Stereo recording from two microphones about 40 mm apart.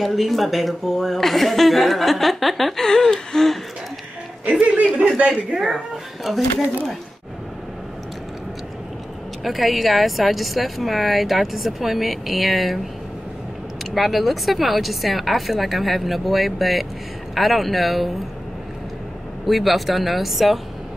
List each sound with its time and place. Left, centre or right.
0.0 s speech: centre
2.8 s whimper: centre
4.5 s a sound: right
5.5 s a woman's voice: centre
6.3 s speech: centre
9.4 s speech: centre
13.9 s speech: centre
19.4 s speech: centre